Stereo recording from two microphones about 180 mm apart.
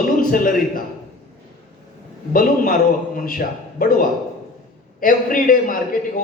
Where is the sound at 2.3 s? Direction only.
50° left (ahead or behind).